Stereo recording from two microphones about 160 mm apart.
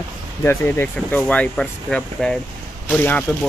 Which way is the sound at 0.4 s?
15° left (ahead or behind).